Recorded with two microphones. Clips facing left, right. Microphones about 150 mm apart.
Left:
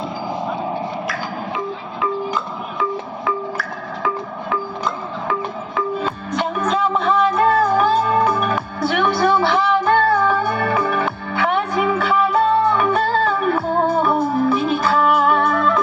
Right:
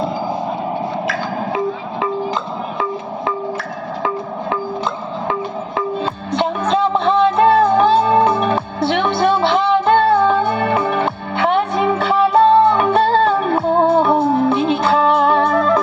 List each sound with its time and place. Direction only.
2.0 s wood block: 30° right (ahead or behind)
5.3 s music: 25° right (ahead or behind)